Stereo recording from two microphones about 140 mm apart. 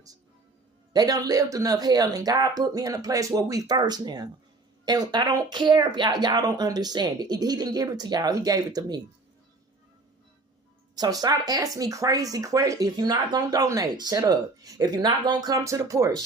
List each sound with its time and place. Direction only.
0.9 s speech: 30° right (ahead or behind)
10.9 s speech: 30° right (ahead or behind)